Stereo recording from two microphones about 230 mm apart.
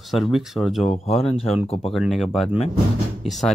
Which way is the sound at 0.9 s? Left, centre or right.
Left.